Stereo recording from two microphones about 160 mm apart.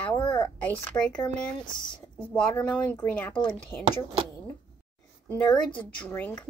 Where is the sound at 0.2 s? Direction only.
30° left (ahead or behind).